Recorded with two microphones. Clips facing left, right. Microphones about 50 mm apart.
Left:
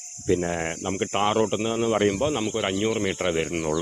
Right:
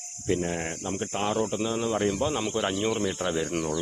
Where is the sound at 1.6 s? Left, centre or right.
Left.